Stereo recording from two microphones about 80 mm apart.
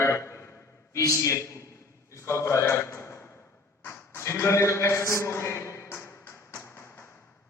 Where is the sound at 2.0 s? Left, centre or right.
Left.